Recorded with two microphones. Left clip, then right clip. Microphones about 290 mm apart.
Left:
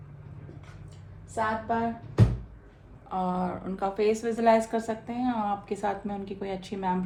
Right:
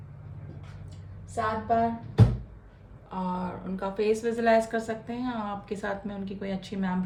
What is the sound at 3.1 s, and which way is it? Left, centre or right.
A woman's voice, left.